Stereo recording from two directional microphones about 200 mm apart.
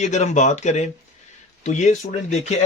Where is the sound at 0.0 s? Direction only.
35° left (ahead or behind).